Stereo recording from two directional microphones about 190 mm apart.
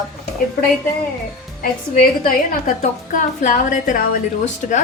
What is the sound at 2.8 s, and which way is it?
A woman's voice, 40° left (ahead or behind).